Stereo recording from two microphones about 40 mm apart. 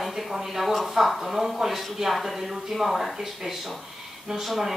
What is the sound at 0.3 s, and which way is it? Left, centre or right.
Speech, centre.